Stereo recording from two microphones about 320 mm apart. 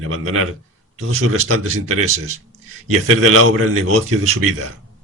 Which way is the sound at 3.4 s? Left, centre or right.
Right.